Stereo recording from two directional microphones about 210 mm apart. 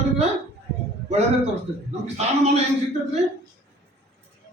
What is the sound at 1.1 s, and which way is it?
A man's voice, 30° right (ahead or behind).